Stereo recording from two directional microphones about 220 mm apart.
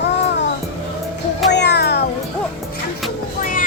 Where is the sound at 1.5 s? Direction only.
50° left (ahead or behind).